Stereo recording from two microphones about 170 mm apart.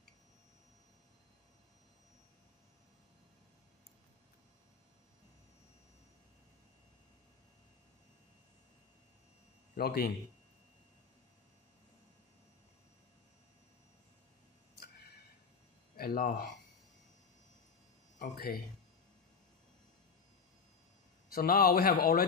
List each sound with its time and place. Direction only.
9.8 s a man's voice: 65° left (ahead or behind)
16.0 s speech: 60° left (ahead or behind)
18.2 s speech: 60° left (ahead or behind)
21.3 s speech: 60° left (ahead or behind)